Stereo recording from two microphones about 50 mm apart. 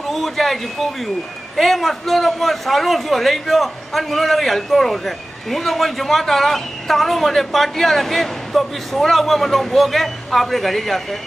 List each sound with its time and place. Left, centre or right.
0.1 s a man's voice: centre